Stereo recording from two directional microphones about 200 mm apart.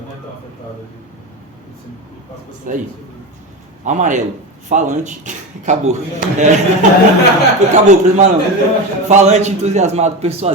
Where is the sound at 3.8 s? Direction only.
35° right (ahead or behind).